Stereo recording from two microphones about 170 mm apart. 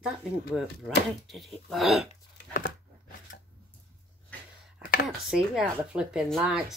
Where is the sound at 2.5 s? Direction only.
50° left (ahead or behind).